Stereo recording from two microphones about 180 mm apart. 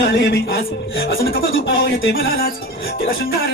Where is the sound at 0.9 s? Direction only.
60° left (ahead or behind).